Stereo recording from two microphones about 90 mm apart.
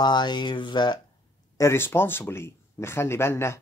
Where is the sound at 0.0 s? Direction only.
55° left (ahead or behind).